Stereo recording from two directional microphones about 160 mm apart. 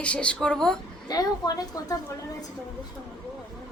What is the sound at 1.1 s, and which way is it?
Speech, 25° left (ahead or behind).